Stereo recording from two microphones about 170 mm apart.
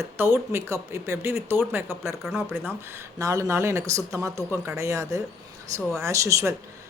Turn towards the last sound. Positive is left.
turn(degrees=-20)  # may be behind; listen again after turning